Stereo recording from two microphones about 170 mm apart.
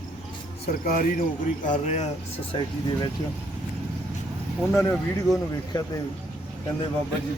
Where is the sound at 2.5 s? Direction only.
25° left (ahead or behind).